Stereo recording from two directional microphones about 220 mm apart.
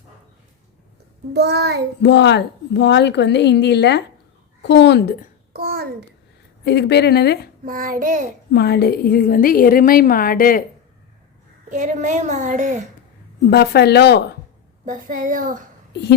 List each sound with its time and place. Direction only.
1.3 s child singing: 50° right (ahead or behind)
2.0 s a woman's voice: 50° left (ahead or behind)
5.5 s a child's voice: 45° right (ahead or behind)
6.7 s a woman's voice: 50° left (ahead or behind)
7.6 s a woman's voice: 40° right (ahead or behind)
8.5 s a woman's voice: 50° left (ahead or behind)
11.7 s a woman's voice: 35° right (ahead or behind)
13.5 s a woman's voice: 45° left (ahead or behind)
14.8 s a woman's voice: 35° right (ahead or behind)
15.9 s a woman's voice: 50° left (ahead or behind)